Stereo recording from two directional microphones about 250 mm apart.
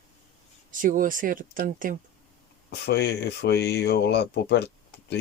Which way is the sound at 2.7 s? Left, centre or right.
Left.